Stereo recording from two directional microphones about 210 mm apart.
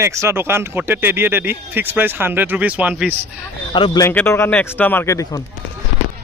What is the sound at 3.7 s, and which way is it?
Speech, 20° left (ahead or behind).